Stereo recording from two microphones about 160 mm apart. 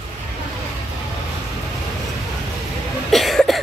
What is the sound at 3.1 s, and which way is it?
Cough, centre (ahead or behind).